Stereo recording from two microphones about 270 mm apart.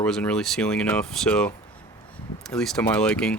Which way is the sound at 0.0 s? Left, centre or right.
Centre.